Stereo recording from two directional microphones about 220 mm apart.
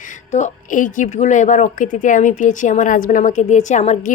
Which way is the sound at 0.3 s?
30° left (ahead or behind).